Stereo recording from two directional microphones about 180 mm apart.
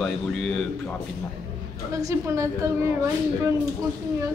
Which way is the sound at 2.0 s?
15° right (ahead or behind).